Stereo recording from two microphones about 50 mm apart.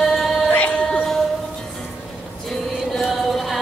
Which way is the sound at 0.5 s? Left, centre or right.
Left.